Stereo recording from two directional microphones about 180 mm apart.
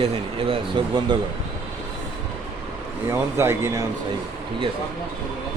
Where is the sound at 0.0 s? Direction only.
30° right (ahead or behind).